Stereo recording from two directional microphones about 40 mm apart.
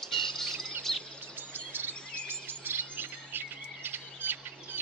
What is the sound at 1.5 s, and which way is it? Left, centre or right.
Chirp, right.